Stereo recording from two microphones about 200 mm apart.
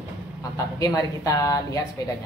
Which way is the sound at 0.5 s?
15° left (ahead or behind).